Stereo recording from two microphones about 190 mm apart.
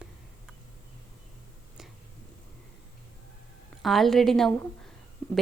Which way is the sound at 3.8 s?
Centre (ahead or behind).